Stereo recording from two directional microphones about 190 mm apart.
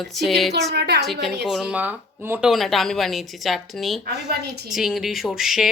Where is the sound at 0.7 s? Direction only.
60° right (ahead or behind).